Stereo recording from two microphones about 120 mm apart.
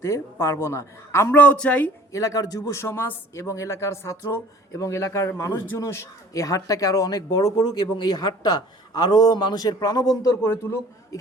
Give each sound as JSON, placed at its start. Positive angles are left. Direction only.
{"t": 0.0, "sound": "speech", "side_deg": 25}
{"t": 2.1, "sound": "speech", "side_deg": 30}
{"t": 10.4, "sound": "speech", "side_deg": 20}